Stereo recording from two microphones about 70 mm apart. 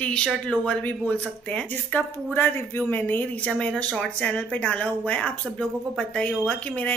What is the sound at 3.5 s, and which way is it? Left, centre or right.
A woman's voice, centre.